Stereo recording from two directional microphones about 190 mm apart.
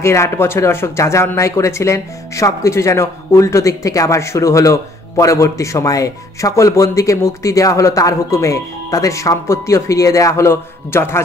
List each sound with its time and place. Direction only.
0.0 s speech: 15° left (ahead or behind)